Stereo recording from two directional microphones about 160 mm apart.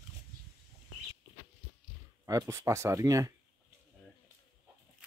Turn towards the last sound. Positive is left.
turn(degrees=-20)  # may be behind; listen again after turning